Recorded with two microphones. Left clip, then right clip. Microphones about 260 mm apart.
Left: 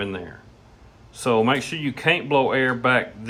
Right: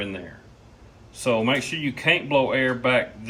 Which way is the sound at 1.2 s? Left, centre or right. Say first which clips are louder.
Left 2 dB; left.